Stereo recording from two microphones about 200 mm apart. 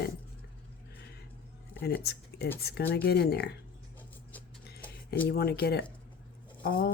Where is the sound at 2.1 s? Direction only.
55° left (ahead or behind).